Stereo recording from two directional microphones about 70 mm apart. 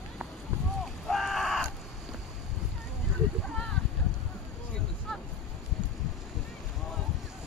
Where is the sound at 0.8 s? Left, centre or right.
Centre.